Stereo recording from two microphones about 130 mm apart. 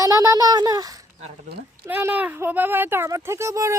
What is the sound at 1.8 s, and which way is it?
Speech, 15° right (ahead or behind).